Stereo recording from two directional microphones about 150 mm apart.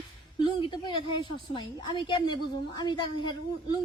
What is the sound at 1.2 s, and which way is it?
A woman's voice, 30° left (ahead or behind).